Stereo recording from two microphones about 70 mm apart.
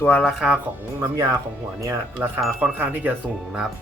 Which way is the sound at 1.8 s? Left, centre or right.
Right.